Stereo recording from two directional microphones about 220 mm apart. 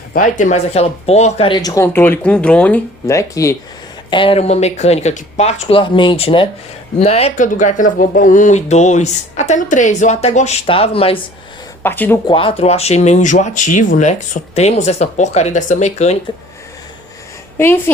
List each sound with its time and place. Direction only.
0.1 s speech: 35° left (ahead or behind); by 3.5 s 15° left (ahead or behind)
4.1 s speech: 25° left (ahead or behind)
11.8 s speech: 10° left (ahead or behind)
12.2 s speech: 25° left (ahead or behind)
17.6 s speech: 10° left (ahead or behind)